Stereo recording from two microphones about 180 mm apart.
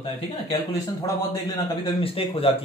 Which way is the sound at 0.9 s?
20° left (ahead or behind).